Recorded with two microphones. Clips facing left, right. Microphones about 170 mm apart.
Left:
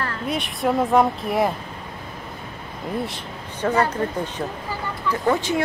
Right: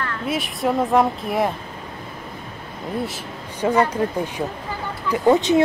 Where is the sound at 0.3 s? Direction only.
Centre (ahead or behind).